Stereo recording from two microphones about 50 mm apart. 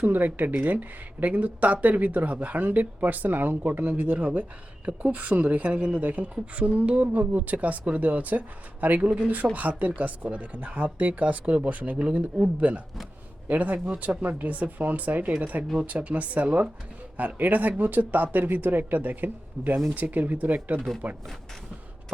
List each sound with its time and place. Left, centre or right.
0.0 s speech: right